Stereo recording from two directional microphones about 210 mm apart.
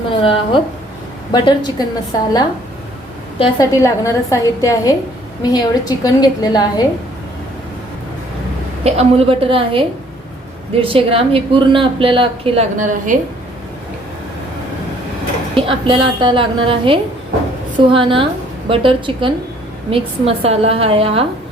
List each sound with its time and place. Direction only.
0.1 s a woman's voice: 25° left (ahead or behind)
3.3 s a woman's voice: 20° left (ahead or behind)
8.8 s speech: 30° right (ahead or behind)
15.5 s speech: 25° right (ahead or behind)